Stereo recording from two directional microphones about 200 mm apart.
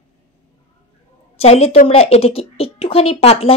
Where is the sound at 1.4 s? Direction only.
30° left (ahead or behind).